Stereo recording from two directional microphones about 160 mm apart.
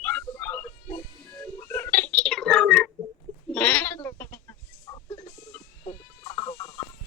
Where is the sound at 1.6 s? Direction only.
15° left (ahead or behind).